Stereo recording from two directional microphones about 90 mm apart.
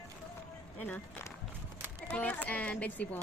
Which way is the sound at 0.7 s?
15° left (ahead or behind).